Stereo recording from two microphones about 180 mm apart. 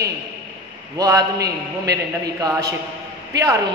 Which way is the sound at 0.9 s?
20° right (ahead or behind).